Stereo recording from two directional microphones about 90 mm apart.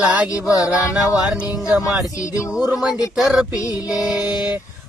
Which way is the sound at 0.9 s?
10° right (ahead or behind).